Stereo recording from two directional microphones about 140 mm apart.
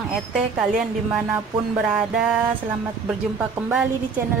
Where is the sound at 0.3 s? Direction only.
5° right (ahead or behind).